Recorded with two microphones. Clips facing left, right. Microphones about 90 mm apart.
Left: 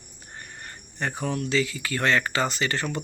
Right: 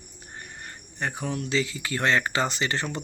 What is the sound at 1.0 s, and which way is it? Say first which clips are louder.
Speech: left 2 dB; 10° right (ahead or behind).